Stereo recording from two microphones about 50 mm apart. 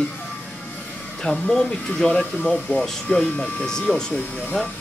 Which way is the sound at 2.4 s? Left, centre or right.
Left.